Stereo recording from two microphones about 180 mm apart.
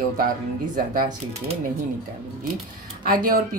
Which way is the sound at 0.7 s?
45° right (ahead or behind).